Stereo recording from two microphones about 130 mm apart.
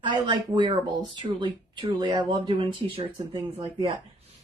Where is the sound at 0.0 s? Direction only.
40° right (ahead or behind).